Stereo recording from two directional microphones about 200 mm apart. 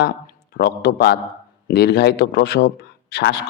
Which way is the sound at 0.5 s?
50° left (ahead or behind).